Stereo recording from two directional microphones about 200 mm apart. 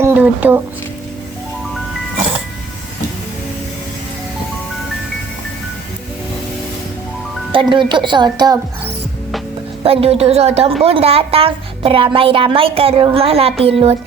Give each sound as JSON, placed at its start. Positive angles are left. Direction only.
{"t": 0.0, "sound": "a sound", "side_deg": -10}
{"t": 7.5, "sound": "a woman's voice", "side_deg": -25}
{"t": 9.8, "sound": "a woman's voice", "side_deg": -30}